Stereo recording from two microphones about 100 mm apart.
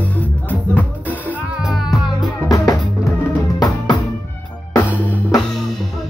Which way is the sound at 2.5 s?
35° left (ahead or behind).